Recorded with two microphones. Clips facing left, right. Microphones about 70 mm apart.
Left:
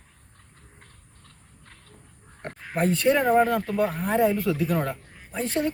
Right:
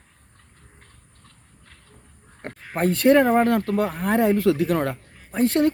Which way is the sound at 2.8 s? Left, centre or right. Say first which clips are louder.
Right 5 dB; right.